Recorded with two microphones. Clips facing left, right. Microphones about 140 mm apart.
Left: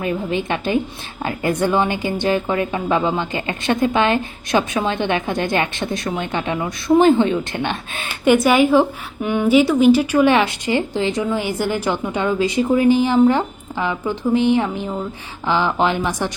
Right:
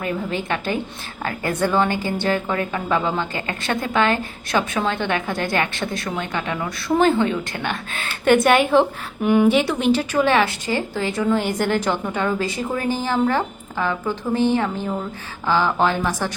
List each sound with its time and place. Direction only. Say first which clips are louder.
0.0 s a woman's voice: left 3 dB; 20° left (ahead or behind)
8.2 s a woman's voice: left 2 dB; centre (ahead or behind); by 16.3 s 20° left (ahead or behind)